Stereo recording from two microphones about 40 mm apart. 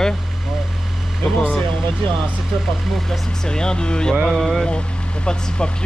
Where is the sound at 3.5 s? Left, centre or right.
Centre.